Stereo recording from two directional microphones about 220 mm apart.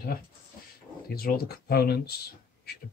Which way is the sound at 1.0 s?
45° left (ahead or behind).